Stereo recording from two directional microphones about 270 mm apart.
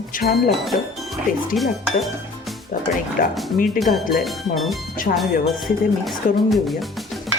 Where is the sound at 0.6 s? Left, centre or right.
Centre.